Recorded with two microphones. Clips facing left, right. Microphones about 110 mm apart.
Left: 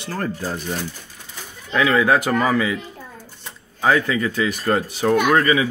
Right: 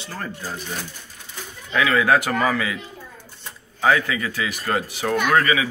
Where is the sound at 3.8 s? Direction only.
30° left (ahead or behind).